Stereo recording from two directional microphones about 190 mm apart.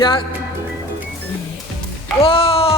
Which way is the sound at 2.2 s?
30° left (ahead or behind).